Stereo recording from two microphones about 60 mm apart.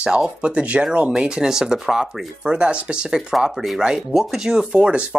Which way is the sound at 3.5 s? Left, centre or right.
Centre.